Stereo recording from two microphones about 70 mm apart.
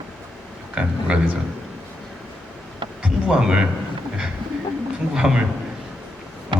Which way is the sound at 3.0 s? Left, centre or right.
Centre.